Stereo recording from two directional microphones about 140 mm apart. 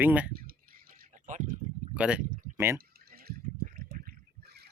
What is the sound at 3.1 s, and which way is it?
Water, 90° right.